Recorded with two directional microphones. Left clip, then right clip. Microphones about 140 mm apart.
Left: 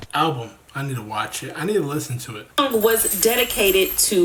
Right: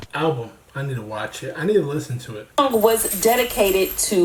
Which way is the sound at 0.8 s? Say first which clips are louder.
Left 2 dB; 15° left (ahead or behind).